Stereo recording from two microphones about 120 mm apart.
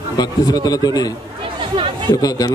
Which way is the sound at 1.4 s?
45° right (ahead or behind).